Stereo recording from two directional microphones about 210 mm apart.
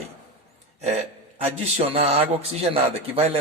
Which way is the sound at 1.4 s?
30° right (ahead or behind).